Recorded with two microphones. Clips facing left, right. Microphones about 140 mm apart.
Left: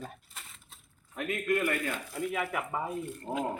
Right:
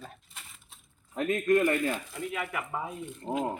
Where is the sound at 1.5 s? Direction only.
30° right (ahead or behind).